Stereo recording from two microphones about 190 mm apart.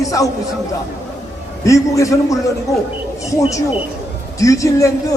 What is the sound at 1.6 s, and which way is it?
Speech, 15° left (ahead or behind).